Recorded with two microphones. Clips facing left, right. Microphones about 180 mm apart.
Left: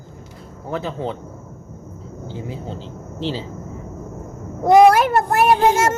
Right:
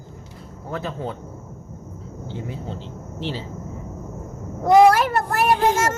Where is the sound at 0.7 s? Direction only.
20° left (ahead or behind).